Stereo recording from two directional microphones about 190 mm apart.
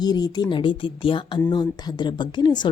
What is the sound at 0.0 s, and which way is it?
Speech, 20° left (ahead or behind).